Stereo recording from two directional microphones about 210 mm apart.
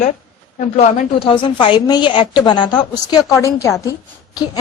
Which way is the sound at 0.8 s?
30° left (ahead or behind).